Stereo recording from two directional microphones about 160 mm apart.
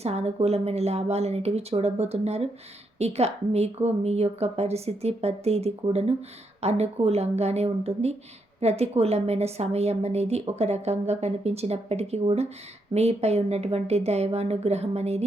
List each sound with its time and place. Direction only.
0.0 s a woman's voice: 40° right (ahead or behind)